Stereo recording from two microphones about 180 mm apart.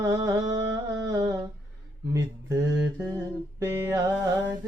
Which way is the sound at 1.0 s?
20° right (ahead or behind).